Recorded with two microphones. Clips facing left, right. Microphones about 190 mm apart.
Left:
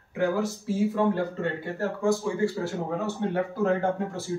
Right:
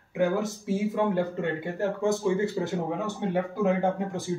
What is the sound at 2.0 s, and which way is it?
Speech, 20° right (ahead or behind).